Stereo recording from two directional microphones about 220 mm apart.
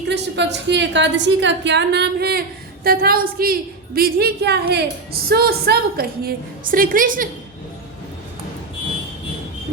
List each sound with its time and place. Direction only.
0.1 s a woman's voice: 50° right (ahead or behind)